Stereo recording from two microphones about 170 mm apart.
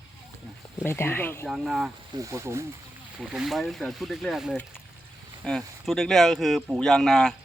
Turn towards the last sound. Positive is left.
turn(degrees=5)  # may be behind; listen again after turning